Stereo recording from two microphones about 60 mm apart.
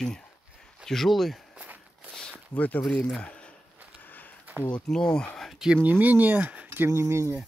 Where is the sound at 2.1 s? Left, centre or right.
Centre.